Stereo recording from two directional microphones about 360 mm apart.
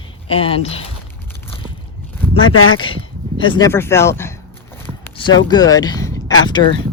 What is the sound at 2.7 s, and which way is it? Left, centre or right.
Speech, centre.